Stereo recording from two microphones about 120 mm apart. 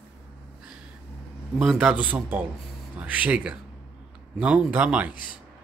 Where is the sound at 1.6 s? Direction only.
5° right (ahead or behind).